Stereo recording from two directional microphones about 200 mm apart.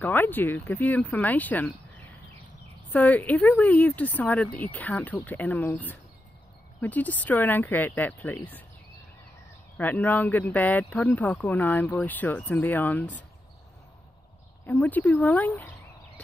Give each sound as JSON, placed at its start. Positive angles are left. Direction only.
{"t": 0.0, "sound": "speech", "side_deg": 10}
{"t": 2.9, "sound": "speech", "side_deg": 10}
{"t": 9.8, "sound": "speech", "side_deg": 10}
{"t": 14.7, "sound": "speech", "side_deg": 10}